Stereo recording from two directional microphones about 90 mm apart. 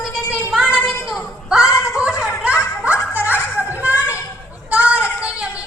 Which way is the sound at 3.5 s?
15° right (ahead or behind).